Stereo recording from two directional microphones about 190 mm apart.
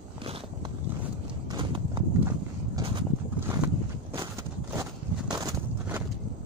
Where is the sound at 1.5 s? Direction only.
25° right (ahead or behind).